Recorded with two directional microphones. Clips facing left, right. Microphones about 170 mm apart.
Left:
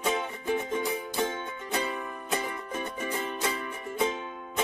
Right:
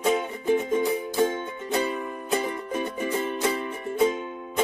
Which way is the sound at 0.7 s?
25° right (ahead or behind).